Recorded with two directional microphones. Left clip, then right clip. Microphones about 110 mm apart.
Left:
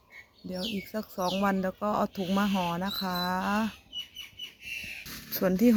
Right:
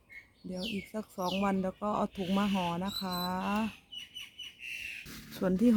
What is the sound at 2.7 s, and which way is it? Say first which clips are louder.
Speech: left 4 dB; 35° left (ahead or behind).